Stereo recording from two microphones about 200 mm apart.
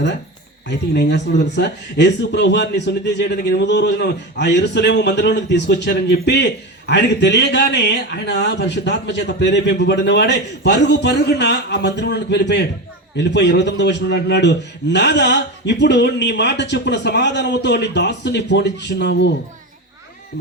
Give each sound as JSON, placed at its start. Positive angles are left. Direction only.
{"t": 0.7, "sound": "speech", "side_deg": 60}